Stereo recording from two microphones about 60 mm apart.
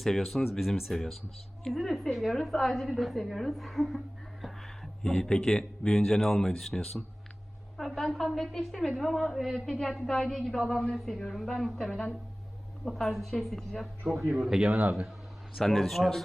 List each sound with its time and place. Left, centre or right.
0.0 s a woman's voice: centre
5.0 s a woman's voice: centre
14.3 s a man's voice: centre
14.7 s a man's voice: right
15.5 s a woman's voice: centre